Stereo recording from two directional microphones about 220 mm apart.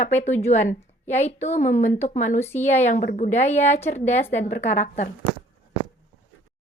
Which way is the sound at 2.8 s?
35° left (ahead or behind).